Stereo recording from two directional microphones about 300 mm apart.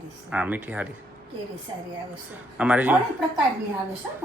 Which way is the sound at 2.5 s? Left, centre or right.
Centre.